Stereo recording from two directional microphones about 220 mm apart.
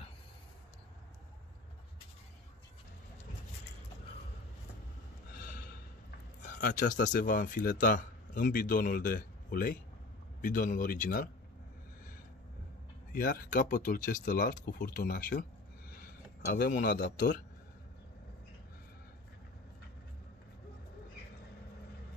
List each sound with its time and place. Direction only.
6.4 s speech: 35° left (ahead or behind)
13.1 s speech: 40° left (ahead or behind)